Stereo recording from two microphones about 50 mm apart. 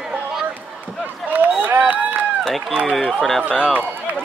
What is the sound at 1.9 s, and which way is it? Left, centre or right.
Run, right.